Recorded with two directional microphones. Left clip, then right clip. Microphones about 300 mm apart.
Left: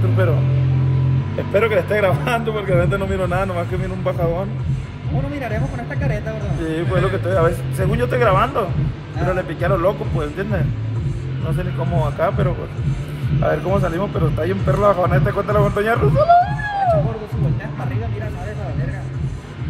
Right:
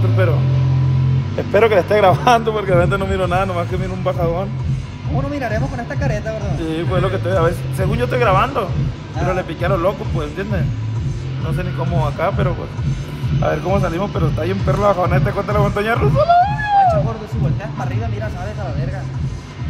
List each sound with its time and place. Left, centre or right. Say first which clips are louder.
1.5 s speech: right 4 dB; right; by 4.5 s centre
6.6 s speech: even; centre